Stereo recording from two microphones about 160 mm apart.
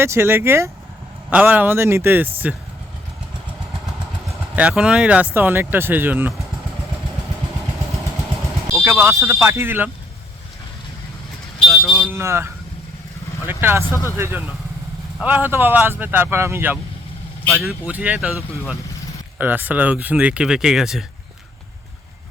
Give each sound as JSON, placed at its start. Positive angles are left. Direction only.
{"t": 0.0, "sound": "speech", "side_deg": -15}
{"t": 4.5, "sound": "speech", "side_deg": -5}
{"t": 8.8, "sound": "speech", "side_deg": -15}
{"t": 11.6, "sound": "vehicle", "side_deg": 0}
{"t": 12.0, "sound": "speech", "side_deg": -15}
{"t": 13.5, "sound": "speech", "side_deg": -15}
{"t": 13.8, "sound": "speech", "side_deg": 20}
{"t": 14.2, "sound": "speech", "side_deg": -15}
{"t": 17.4, "sound": "speech", "side_deg": 0}